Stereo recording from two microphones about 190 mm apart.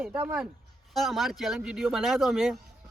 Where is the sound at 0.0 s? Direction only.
10° right (ahead or behind).